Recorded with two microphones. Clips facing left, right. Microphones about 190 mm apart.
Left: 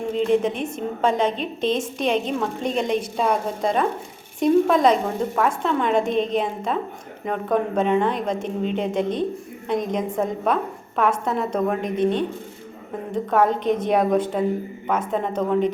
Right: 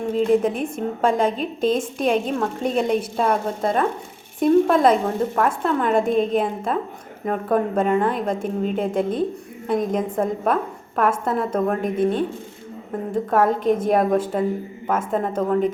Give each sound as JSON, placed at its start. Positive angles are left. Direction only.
{"t": 0.1, "sound": "a woman's voice", "side_deg": -5}
{"t": 13.3, "sound": "a woman's voice", "side_deg": -5}